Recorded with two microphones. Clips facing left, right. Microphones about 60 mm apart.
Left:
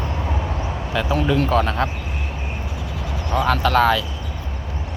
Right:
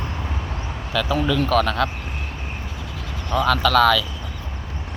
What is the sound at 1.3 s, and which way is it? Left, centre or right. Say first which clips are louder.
Speech: left 1 dB; right.